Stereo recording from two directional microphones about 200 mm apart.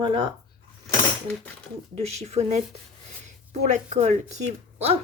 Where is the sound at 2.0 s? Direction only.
30° right (ahead or behind).